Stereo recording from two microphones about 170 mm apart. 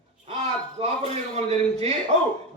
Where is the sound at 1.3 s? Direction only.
40° right (ahead or behind).